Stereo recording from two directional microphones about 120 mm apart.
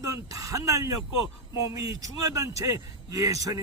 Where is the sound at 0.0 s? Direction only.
25° right (ahead or behind).